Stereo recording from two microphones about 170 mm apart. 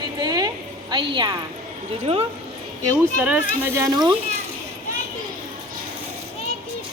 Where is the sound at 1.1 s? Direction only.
25° right (ahead or behind).